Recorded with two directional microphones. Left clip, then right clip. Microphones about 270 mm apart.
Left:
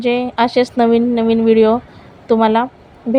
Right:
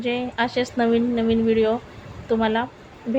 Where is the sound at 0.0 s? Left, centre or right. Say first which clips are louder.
Left 9 dB; left.